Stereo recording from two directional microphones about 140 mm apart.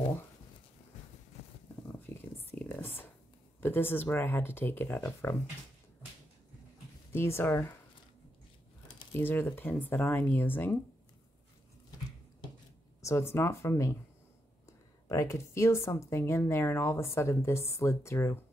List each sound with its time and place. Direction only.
2.1 s a sound: 10° left (ahead or behind)
3.6 s speech: 15° left (ahead or behind)
7.1 s speech: 15° left (ahead or behind)
9.2 s speech: 15° left (ahead or behind)
13.0 s a woman's voice: 20° left (ahead or behind)